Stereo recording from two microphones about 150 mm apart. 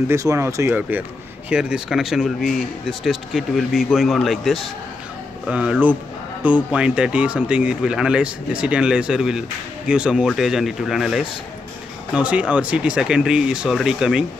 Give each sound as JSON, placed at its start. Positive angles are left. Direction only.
{"t": 0.1, "sound": "speech", "side_deg": -20}